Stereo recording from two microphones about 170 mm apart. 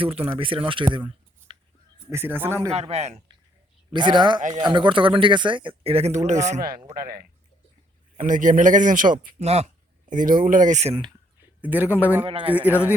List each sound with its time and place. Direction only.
0.0 s speech: 35° right (ahead or behind)
2.0 s speech: 15° right (ahead or behind)
2.7 s speech: 40° right (ahead or behind)
3.9 s speech: 25° right (ahead or behind)
4.4 s a man's voice: 45° right (ahead or behind)
4.6 s speech: 30° right (ahead or behind); by 6.6 s 45° right (ahead or behind)
8.1 s a man's voice: 50° right (ahead or behind)
9.4 s speech: 40° right (ahead or behind)
11.6 s speech: 10° right (ahead or behind)
12.2 s speech: 30° right (ahead or behind)
12.5 s speech: 10° right (ahead or behind)